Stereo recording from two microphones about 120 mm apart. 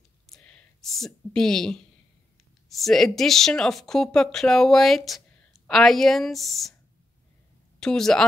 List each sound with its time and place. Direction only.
0.3 s speech: 5° left (ahead or behind)
7.8 s speech: 5° left (ahead or behind)